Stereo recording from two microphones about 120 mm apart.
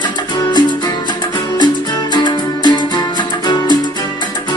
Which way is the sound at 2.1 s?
40° left (ahead or behind).